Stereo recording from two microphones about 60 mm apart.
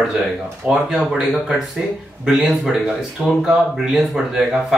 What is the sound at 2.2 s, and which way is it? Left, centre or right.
Speech, centre.